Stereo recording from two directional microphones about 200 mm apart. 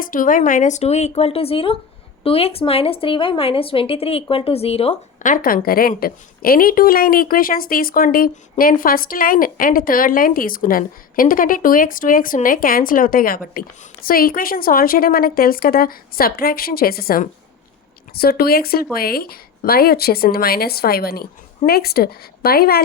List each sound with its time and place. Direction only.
0.0 s a woman's voice: 45° left (ahead or behind)